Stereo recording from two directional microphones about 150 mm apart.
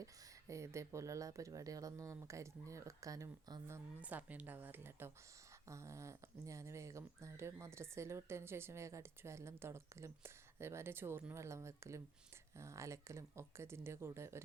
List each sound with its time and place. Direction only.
0.0 s speech: 20° right (ahead or behind)
4.0 s speech: 10° right (ahead or behind)